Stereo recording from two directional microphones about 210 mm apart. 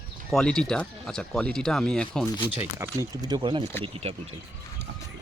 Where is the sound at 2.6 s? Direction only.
10° right (ahead or behind).